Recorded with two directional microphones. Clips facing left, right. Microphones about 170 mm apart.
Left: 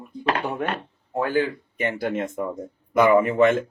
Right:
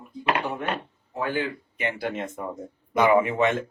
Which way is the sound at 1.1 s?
45° left (ahead or behind).